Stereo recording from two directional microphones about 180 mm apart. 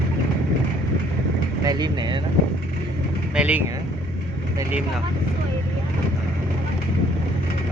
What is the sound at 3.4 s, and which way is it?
Speech, 5° right (ahead or behind).